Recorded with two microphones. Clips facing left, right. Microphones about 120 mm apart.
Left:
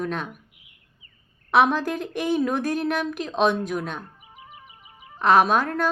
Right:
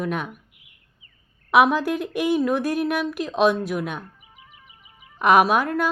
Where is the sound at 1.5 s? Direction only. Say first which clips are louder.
Right 2 dB; 10° right (ahead or behind).